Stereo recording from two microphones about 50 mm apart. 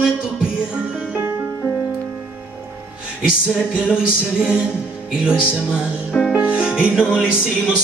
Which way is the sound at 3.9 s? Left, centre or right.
Centre.